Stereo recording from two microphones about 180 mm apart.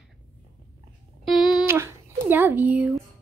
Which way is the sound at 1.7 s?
15° right (ahead or behind).